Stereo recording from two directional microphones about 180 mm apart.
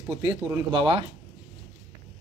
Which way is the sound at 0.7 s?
30° right (ahead or behind).